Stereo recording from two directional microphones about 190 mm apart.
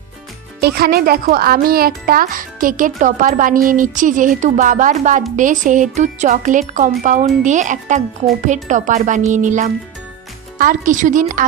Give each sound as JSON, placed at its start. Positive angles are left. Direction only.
{"t": 0.6, "sound": "speech", "side_deg": -55}